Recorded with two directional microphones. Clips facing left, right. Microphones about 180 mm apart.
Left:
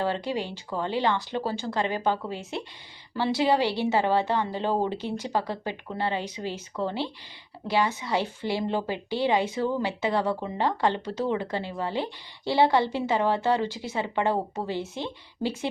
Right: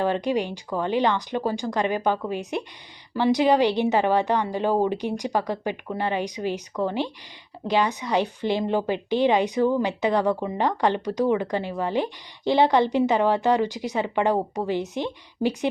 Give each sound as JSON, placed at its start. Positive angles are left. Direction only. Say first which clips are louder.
{"t": 0.0, "sound": "speech", "louder": "right 5 dB", "side_deg": -15}